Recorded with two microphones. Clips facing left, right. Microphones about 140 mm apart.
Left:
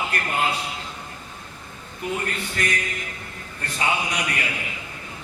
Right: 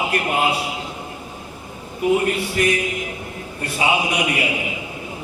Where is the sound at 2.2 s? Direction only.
10° right (ahead or behind).